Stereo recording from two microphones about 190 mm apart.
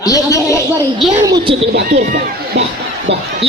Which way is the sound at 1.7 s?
60° right (ahead or behind).